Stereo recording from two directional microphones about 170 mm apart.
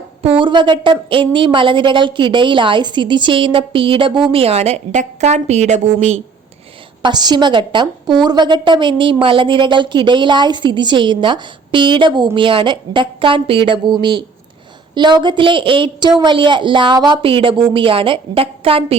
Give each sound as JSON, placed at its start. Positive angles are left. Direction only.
{"t": 0.2, "sound": "a woman's voice", "side_deg": -30}
{"t": 7.0, "sound": "a woman's voice", "side_deg": -25}